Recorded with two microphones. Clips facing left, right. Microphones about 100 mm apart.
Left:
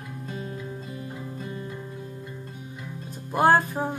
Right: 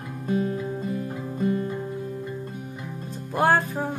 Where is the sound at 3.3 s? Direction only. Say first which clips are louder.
Left 1 dB; 15° left (ahead or behind).